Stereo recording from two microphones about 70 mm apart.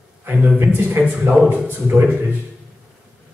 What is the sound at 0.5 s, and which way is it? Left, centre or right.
Speech, right.